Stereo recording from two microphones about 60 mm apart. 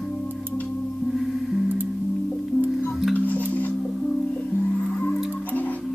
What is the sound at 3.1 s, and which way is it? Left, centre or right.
Music, left.